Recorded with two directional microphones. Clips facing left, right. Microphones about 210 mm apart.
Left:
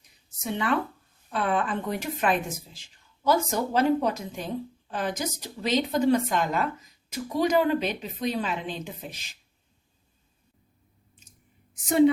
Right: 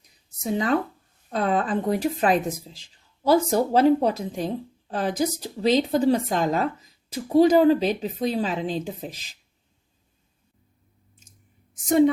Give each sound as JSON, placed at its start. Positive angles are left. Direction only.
{"t": 0.4, "sound": "a woman's voice", "side_deg": -40}
{"t": 11.7, "sound": "a woman's voice", "side_deg": -45}